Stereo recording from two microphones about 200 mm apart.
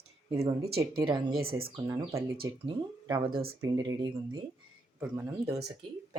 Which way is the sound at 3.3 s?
50° right (ahead or behind).